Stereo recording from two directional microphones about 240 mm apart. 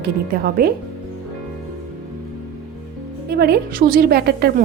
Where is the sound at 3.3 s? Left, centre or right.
Right.